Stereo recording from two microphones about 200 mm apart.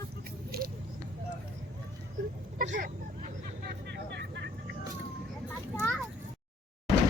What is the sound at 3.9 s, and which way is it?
Vehicle, 55° right (ahead or behind).